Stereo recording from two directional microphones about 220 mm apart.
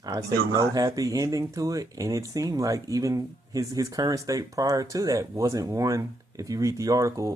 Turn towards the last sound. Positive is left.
turn(degrees=-15)  # may be behind; listen again after turning